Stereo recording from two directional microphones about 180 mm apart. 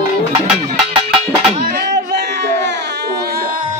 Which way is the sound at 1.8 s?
65° right (ahead or behind).